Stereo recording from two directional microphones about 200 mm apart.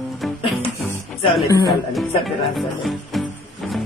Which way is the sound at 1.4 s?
15° left (ahead or behind).